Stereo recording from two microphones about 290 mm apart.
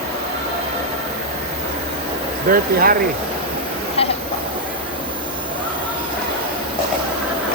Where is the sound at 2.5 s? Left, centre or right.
Right.